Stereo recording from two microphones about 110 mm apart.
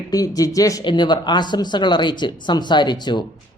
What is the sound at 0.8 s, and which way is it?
Speech, 45° left (ahead or behind).